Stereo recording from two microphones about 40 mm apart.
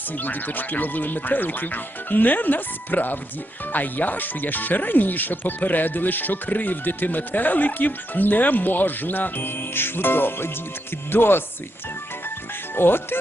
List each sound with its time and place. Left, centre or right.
0.2 s speech: left
12.7 s speech: left